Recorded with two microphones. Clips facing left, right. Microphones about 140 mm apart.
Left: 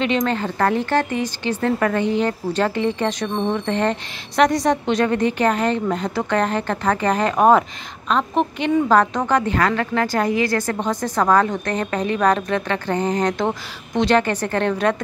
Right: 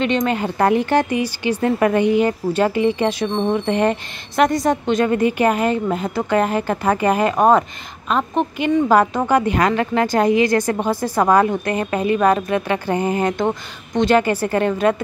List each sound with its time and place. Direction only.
0.0 s speech: centre (ahead or behind)
0.3 s speech: 15° right (ahead or behind)